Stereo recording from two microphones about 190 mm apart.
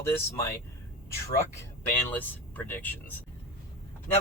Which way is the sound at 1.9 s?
10° left (ahead or behind).